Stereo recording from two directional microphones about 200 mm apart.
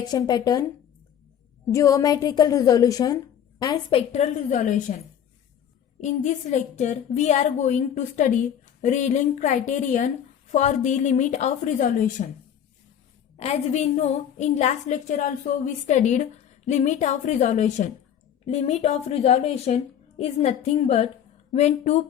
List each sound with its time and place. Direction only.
0.0 s speech: 20° left (ahead or behind)
1.7 s a woman's voice: 15° left (ahead or behind)
3.9 s a woman's voice: 35° left (ahead or behind)
6.0 s a woman's voice: 35° left (ahead or behind)
13.3 s a woman's voice: 35° left (ahead or behind)